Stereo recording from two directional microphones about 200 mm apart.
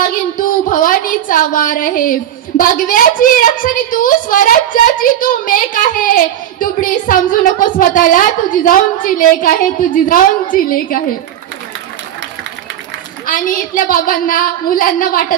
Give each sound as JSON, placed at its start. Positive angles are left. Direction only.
{"t": 0.3, "sound": "a sound", "side_deg": 45}
{"t": 2.6, "sound": "a woman's voice", "side_deg": 45}
{"t": 13.2, "sound": "a woman's voice", "side_deg": 45}